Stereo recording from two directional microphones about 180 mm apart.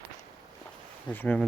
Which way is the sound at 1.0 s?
10° left (ahead or behind).